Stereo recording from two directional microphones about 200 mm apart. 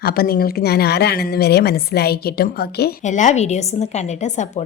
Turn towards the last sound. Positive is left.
turn(degrees=35)  # may be behind; listen again after turning